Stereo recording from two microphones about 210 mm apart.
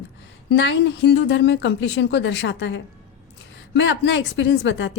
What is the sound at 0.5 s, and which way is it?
A woman's voice, 55° left (ahead or behind).